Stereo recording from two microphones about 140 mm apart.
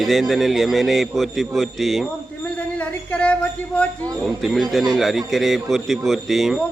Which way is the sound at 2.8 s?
10° left (ahead or behind).